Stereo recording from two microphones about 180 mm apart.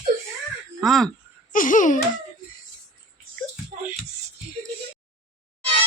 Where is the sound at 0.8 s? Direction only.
Centre (ahead or behind).